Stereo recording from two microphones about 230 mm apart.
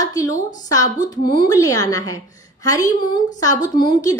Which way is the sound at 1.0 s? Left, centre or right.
Centre.